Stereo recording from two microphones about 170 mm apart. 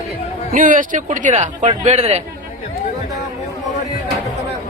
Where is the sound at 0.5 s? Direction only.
50° right (ahead or behind).